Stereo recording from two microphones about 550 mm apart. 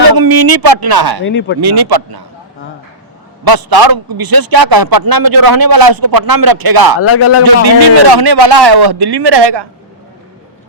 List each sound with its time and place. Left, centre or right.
0.1 s speech: right
1.2 s a man's voice: centre
1.6 s a man's voice: right
3.4 s a man's voice: right
7.0 s a man's voice: left
7.4 s a man's voice: right